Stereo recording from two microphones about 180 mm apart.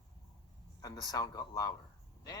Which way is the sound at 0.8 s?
20° left (ahead or behind).